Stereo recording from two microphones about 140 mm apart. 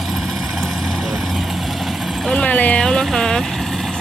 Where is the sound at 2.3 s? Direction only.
10° left (ahead or behind).